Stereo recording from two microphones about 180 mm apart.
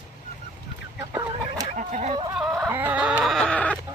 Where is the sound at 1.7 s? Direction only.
40° right (ahead or behind).